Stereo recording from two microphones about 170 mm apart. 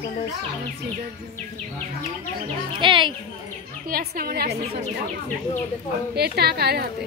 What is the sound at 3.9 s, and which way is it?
Speech, 60° right (ahead or behind).